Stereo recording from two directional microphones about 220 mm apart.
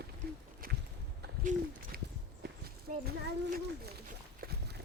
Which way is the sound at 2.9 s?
35° right (ahead or behind).